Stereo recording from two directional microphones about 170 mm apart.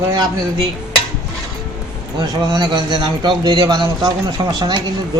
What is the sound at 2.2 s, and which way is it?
A man's voice, 25° right (ahead or behind).